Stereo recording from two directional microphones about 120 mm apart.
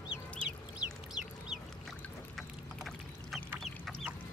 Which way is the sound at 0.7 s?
5° right (ahead or behind).